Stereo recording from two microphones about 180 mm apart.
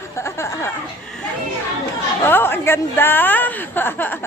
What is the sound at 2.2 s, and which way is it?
A woman's voice, 10° left (ahead or behind).